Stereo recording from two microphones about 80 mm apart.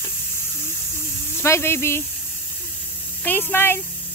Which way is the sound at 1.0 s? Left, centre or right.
Left.